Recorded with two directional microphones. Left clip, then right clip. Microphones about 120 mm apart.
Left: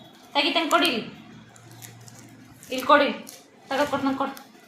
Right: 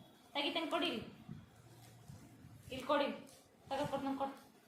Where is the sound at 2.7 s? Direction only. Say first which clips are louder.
Left 18 dB; 35° left (ahead or behind).